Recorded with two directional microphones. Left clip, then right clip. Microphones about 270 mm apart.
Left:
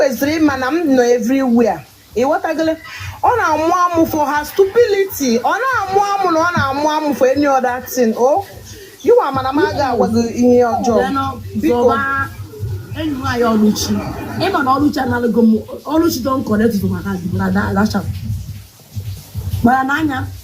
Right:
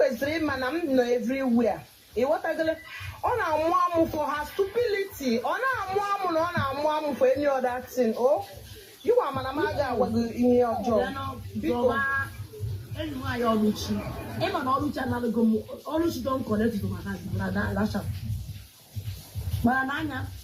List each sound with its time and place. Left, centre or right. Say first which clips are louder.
0.0 s speech: left 11 dB; left
13.2 s speech: left 11 dB; left
19.6 s speech: left 12 dB; left